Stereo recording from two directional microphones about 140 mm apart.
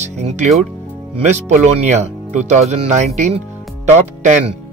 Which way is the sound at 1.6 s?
55° right (ahead or behind).